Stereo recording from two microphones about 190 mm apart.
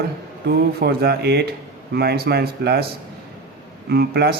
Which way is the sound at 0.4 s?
60° right (ahead or behind).